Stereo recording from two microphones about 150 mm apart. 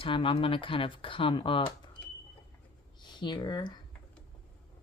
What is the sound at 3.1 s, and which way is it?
Speech, 30° left (ahead or behind).